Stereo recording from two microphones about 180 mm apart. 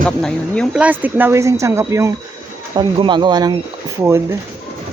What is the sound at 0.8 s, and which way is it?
Speech, 10° right (ahead or behind).